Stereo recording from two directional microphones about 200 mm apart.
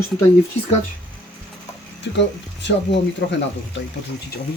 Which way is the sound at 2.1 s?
60° left (ahead or behind).